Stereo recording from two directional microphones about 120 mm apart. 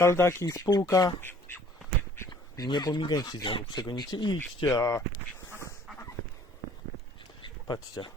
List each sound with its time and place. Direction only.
0.0 s speech: 25° left (ahead or behind)
2.3 s speech: 35° left (ahead or behind)
4.8 s speech: 25° left (ahead or behind)
7.4 s speech: 40° left (ahead or behind)